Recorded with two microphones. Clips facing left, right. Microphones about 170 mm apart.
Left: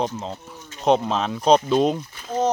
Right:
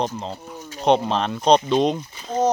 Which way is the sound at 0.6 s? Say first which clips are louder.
Right 6 dB; 40° right (ahead or behind).